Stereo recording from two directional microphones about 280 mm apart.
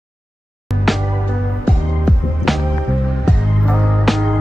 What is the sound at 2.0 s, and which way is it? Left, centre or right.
Music, centre.